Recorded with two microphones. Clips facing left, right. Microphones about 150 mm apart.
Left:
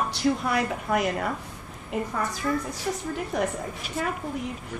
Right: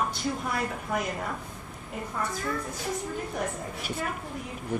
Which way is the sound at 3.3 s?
75° left (ahead or behind).